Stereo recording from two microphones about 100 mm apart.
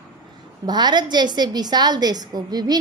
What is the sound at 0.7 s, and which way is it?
A woman's voice, 45° right (ahead or behind).